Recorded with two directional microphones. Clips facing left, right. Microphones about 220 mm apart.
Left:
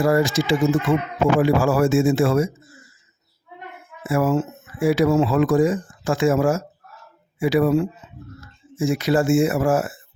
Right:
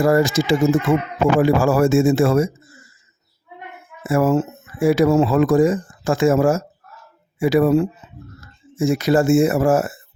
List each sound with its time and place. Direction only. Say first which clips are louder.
0.0 s speech: right 2 dB; 45° right (ahead or behind)
4.0 s speech: right 3 dB; 45° right (ahead or behind)